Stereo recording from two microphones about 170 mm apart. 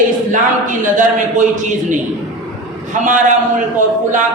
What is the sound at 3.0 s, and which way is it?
Speech, 50° right (ahead or behind).